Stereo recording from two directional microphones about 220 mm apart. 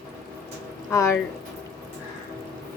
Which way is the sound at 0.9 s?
10° left (ahead or behind).